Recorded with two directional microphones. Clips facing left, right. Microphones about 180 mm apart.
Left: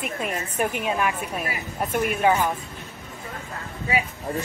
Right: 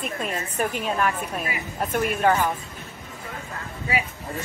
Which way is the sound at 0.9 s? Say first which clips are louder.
Even; 5° left (ahead or behind).